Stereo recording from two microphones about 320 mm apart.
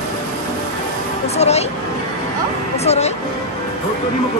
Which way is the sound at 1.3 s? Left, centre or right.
Centre.